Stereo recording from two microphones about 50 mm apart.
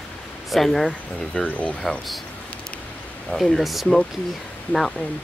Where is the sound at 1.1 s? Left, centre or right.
Left.